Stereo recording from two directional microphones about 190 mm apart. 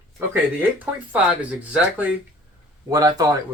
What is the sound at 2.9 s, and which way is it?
Speech, 20° right (ahead or behind).